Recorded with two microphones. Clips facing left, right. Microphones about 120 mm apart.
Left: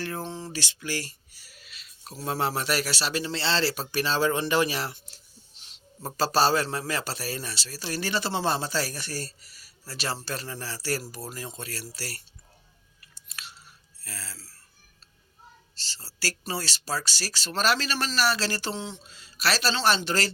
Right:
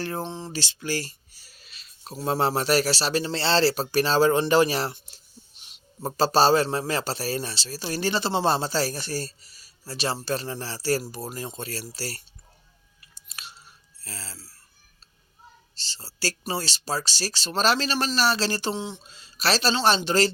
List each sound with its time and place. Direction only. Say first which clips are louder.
0.0 s speech: right 3 dB; 30° right (ahead or behind)
4.9 s a sound: right 3 dB; 15° right (ahead or behind)
6.1 s a man's voice: right 4 dB; 25° right (ahead or behind)
13.2 s chewing: right 1 dB; 20° right (ahead or behind)
14.0 s speech: right 1 dB; 25° right (ahead or behind)
15.7 s a man's voice: right 3 dB; 20° right (ahead or behind)